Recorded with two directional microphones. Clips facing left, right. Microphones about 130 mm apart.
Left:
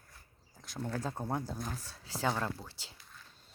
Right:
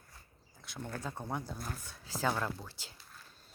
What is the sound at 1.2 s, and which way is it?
Speech, 35° left (ahead or behind).